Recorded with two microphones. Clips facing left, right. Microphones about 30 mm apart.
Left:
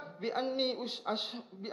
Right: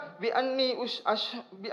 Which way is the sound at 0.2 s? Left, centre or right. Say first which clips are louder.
Right 6 dB; right.